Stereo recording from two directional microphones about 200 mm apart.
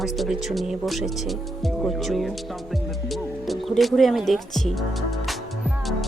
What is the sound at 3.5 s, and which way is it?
Speech, centre (ahead or behind).